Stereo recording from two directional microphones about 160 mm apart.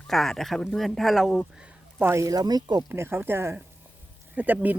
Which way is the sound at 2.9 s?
15° right (ahead or behind).